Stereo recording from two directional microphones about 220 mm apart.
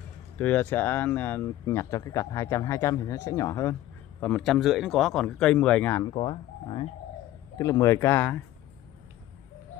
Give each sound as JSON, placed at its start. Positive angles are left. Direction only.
{"t": 0.4, "sound": "speech", "side_deg": 10}
{"t": 4.2, "sound": "speech", "side_deg": 0}
{"t": 6.0, "sound": "speech", "side_deg": 25}